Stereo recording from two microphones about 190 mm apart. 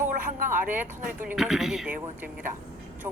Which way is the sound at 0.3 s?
45° right (ahead or behind).